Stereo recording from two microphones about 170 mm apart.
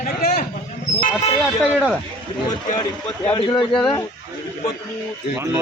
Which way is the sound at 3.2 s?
30° left (ahead or behind).